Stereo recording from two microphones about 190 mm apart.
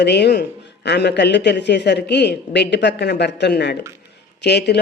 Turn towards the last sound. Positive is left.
turn(degrees=60)  # may be behind; listen again after turning